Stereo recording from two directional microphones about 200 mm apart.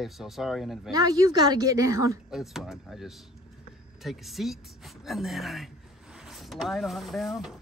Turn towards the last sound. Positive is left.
turn(degrees=0)  # may be behind; listen again after turning